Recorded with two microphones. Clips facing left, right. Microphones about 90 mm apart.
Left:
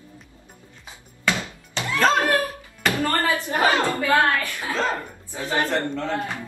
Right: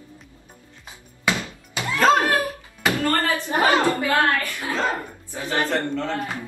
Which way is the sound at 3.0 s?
20° left (ahead or behind).